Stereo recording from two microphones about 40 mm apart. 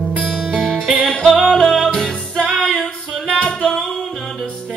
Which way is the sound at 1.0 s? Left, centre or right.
Left.